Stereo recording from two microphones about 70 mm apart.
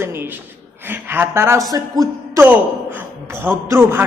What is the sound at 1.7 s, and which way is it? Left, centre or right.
Speech, right.